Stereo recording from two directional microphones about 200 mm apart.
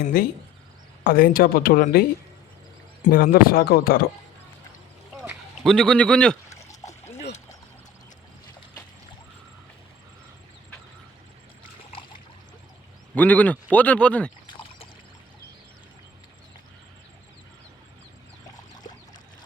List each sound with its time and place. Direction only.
0.1 s speech: 50° left (ahead or behind)
5.6 s a man's voice: 5° left (ahead or behind)
11.9 s a sound: 25° left (ahead or behind)
13.1 s speech: 10° left (ahead or behind)
14.5 s pour: 25° left (ahead or behind)